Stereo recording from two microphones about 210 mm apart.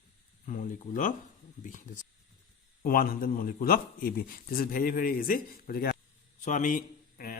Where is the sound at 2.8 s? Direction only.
45° left (ahead or behind).